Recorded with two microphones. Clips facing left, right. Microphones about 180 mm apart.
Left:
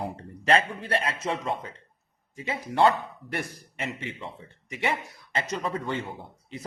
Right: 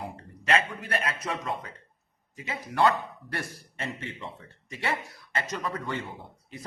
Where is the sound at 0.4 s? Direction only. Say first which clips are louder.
Left 3 dB; 30° left (ahead or behind).